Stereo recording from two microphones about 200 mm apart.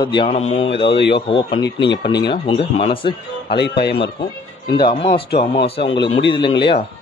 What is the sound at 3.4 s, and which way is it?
Speech, 55° left (ahead or behind).